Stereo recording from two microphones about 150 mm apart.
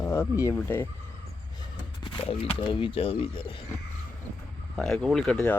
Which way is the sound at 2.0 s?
35° left (ahead or behind).